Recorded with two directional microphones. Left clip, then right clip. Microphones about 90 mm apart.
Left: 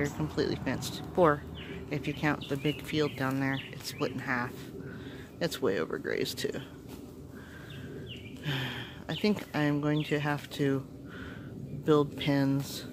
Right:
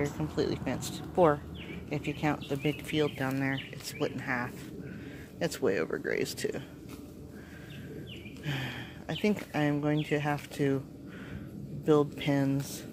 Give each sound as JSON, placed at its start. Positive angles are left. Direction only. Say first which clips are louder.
{"t": 0.2, "sound": "speech", "louder": "even", "side_deg": 20}
{"t": 8.5, "sound": "a sound", "louder": "left 2 dB", "side_deg": 20}
{"t": 9.5, "sound": "speech", "louder": "even", "side_deg": 15}
{"t": 11.8, "sound": "speech", "louder": "even", "side_deg": 20}